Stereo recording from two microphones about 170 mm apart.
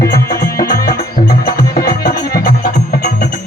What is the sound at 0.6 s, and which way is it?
Music, 60° left (ahead or behind).